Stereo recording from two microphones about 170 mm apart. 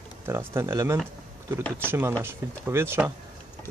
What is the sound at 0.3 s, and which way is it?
Speech, 15° right (ahead or behind).